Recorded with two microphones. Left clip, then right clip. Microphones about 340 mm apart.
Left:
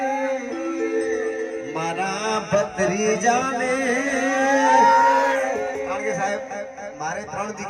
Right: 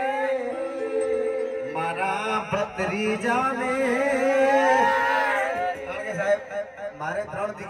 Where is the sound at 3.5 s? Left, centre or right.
Centre.